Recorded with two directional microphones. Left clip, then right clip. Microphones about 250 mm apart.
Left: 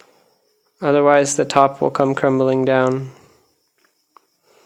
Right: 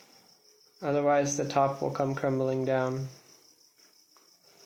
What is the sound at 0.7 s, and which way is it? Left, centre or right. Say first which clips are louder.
Speech: left 12 dB; left.